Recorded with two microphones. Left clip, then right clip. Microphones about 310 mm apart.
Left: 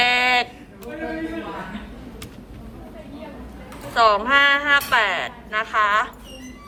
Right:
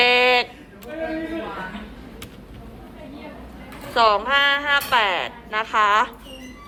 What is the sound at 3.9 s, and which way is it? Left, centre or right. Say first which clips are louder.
A woman's voice: left 1 dB; centre.